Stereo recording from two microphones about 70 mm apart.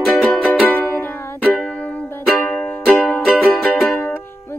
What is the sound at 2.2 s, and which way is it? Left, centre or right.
Music, centre.